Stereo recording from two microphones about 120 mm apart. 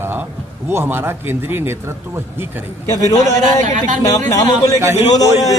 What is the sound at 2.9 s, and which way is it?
Speech, 30° left (ahead or behind).